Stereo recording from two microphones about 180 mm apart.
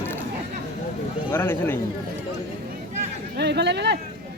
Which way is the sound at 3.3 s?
70° right (ahead or behind).